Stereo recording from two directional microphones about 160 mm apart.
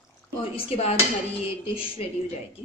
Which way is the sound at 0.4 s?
35° left (ahead or behind).